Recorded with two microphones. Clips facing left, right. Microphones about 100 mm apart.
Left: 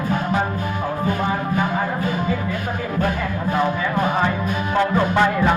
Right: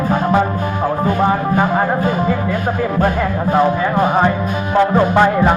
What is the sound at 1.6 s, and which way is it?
Speech, 50° right (ahead or behind).